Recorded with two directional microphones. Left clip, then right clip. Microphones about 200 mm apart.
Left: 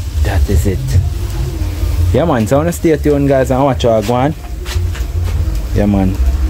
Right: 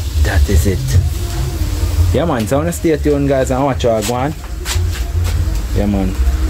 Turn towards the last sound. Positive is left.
turn(degrees=25)  # may be behind; listen again after turning